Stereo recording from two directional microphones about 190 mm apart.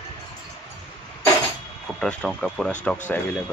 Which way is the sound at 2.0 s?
5° left (ahead or behind).